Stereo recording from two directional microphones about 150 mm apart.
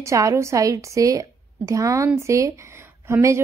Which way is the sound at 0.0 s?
20° right (ahead or behind).